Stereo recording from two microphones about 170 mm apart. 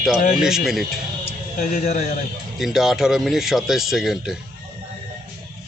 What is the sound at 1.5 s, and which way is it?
Speech, 50° left (ahead or behind).